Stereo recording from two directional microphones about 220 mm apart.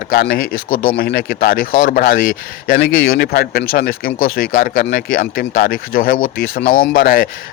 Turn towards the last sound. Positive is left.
turn(degrees=45)  # may be behind; listen again after turning